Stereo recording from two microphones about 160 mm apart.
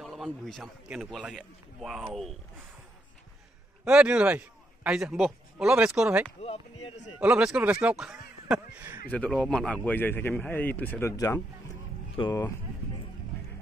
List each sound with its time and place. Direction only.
0.0 s a man's voice: centre (ahead or behind)
3.8 s a man's voice: 5° right (ahead or behind)
6.4 s speech: 40° left (ahead or behind)
7.2 s a man's voice: 5° right (ahead or behind)
9.1 s a man's voice: 5° left (ahead or behind)